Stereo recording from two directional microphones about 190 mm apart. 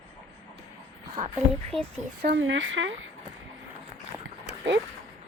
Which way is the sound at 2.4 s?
85° right.